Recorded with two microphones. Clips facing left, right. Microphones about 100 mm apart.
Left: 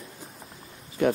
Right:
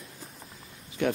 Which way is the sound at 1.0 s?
5° left (ahead or behind).